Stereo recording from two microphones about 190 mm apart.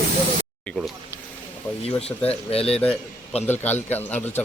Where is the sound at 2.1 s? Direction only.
5° left (ahead or behind).